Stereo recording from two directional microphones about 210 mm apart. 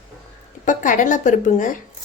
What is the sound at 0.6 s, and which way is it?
A woman's voice, 40° left (ahead or behind).